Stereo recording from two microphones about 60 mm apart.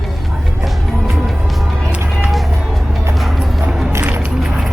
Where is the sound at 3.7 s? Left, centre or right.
Centre.